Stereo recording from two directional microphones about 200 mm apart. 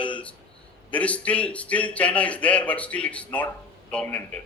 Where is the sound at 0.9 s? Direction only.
5° left (ahead or behind).